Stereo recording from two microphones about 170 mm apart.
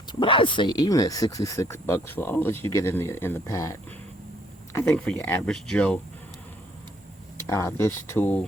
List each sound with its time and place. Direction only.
0.1 s speech: 30° left (ahead or behind); by 6.0 s 5° left (ahead or behind)
7.4 s speech: 15° left (ahead or behind)